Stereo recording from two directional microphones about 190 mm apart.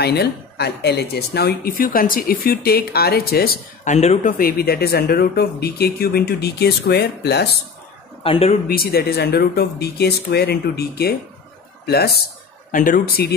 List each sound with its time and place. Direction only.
0.0 s speech: 60° left (ahead or behind)
3.9 s speech: 35° left (ahead or behind); by 7.4 s 60° left (ahead or behind)
8.2 s speech: 30° left (ahead or behind)
8.6 s speech: 55° left (ahead or behind)
12.7 s speech: 45° left (ahead or behind)